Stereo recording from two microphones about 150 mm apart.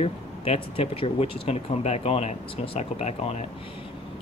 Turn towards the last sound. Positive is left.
turn(degrees=45)  # may be behind; listen again after turning